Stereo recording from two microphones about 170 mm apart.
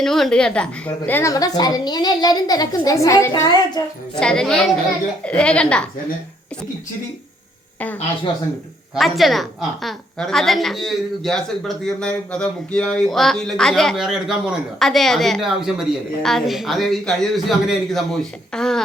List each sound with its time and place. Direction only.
0.0 s a woman's voice: centre (ahead or behind)
4.2 s a child's voice: 5° left (ahead or behind)
9.0 s speech: centre (ahead or behind)